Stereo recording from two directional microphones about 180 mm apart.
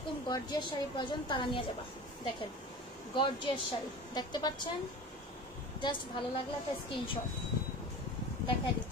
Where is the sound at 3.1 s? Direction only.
25° left (ahead or behind).